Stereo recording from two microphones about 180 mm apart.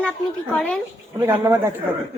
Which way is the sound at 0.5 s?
5° left (ahead or behind).